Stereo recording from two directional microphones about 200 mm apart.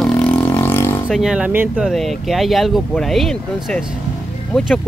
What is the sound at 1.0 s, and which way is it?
Speech, 5° right (ahead or behind).